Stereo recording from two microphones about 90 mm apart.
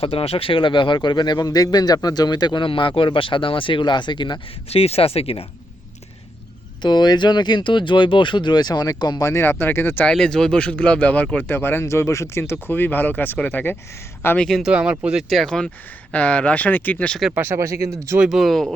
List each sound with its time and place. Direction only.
0.0 s speech: 90° left
6.8 s speech: 55° left (ahead or behind)
9.2 s speech: 30° left (ahead or behind)
10.1 s speech: 5° left (ahead or behind)
14.3 s speech: 5° left (ahead or behind)
14.6 s speech: 10° right (ahead or behind)
15.3 s speech: 5° left (ahead or behind)
17.3 s speech: 25° right (ahead or behind)
18.2 s speech: 5° right (ahead or behind)